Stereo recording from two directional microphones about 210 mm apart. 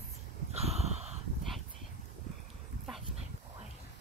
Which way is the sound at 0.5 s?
30° right (ahead or behind).